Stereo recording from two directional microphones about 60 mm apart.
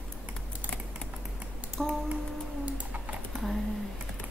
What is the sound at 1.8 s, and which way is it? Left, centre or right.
Music, centre.